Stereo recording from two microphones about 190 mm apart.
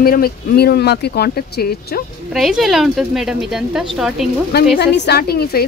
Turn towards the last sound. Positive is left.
turn(degrees=55)  # may be behind; listen again after turning